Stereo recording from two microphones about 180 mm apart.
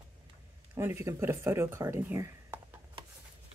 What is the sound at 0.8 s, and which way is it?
Speech, 15° right (ahead or behind).